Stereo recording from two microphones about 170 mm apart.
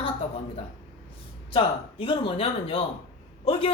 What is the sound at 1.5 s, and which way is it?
A man's voice, 30° left (ahead or behind).